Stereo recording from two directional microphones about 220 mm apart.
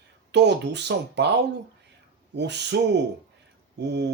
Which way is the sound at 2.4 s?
50° right (ahead or behind).